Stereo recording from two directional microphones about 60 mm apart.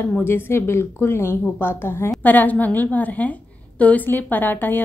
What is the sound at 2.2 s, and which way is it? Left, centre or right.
A woman's voice, left.